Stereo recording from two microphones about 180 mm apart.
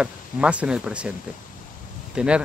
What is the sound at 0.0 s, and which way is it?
Speech, 5° right (ahead or behind).